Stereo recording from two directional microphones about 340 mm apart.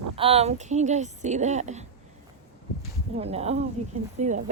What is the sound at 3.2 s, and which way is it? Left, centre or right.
A woman's voice, centre.